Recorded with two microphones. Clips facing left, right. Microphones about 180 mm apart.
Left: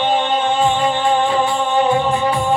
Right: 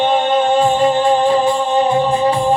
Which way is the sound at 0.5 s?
35° right (ahead or behind).